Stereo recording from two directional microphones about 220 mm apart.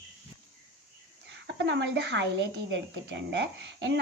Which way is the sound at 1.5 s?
55° right (ahead or behind).